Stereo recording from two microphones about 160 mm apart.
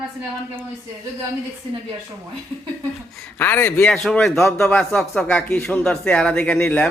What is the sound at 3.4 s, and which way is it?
Speech, 15° left (ahead or behind).